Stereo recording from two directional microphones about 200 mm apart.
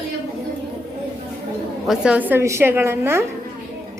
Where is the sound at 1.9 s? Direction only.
5° right (ahead or behind).